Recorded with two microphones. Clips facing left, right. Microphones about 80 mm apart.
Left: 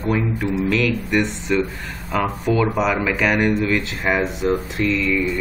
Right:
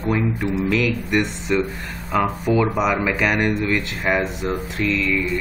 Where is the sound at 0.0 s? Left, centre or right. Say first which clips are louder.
Even; centre.